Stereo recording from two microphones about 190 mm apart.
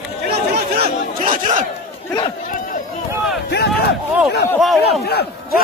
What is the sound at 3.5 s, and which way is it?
Speech, 60° left (ahead or behind).